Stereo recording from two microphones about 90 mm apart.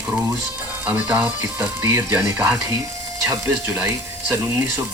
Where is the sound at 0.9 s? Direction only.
20° right (ahead or behind).